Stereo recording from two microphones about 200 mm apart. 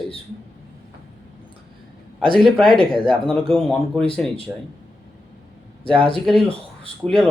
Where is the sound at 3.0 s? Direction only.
5° left (ahead or behind).